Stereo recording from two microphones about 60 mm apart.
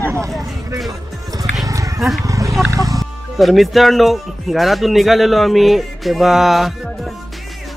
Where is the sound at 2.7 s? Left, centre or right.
Right.